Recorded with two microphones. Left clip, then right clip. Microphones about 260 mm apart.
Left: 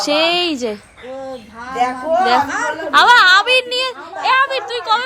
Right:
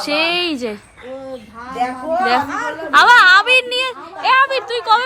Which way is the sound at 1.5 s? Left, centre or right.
Left.